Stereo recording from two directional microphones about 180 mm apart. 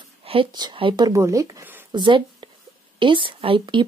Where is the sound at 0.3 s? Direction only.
25° right (ahead or behind).